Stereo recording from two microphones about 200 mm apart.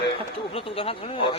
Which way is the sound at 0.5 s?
30° left (ahead or behind).